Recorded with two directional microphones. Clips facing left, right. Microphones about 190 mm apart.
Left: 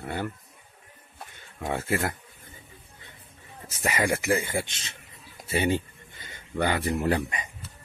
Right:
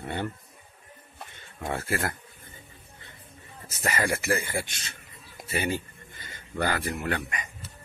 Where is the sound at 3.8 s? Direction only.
15° left (ahead or behind).